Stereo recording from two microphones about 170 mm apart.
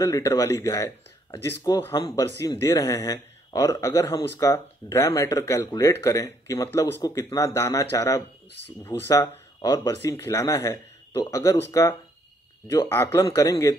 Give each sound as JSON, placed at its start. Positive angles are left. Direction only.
{"t": 0.0, "sound": "speech", "side_deg": 15}
{"t": 8.5, "sound": "speech", "side_deg": -90}
{"t": 8.8, "sound": "speech", "side_deg": 15}